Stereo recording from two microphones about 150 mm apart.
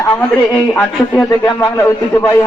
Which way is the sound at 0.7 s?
15° left (ahead or behind).